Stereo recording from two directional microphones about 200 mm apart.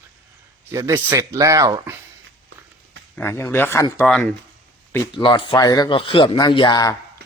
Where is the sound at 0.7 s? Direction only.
10° right (ahead or behind).